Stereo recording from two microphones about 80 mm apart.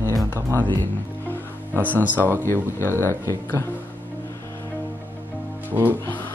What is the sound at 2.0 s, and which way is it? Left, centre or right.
Speech, right.